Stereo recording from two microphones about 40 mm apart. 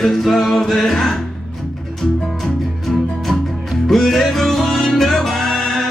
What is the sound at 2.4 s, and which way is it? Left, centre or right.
Music, centre.